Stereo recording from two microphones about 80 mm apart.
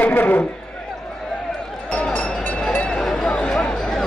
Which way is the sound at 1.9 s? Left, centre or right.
Centre.